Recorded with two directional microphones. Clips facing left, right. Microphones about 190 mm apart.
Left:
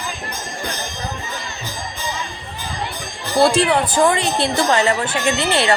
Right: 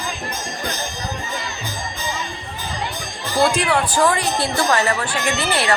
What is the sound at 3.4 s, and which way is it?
A woman's voice, 25° left (ahead or behind).